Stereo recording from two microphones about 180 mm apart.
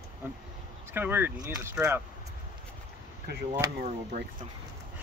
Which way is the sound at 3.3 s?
65° right (ahead or behind).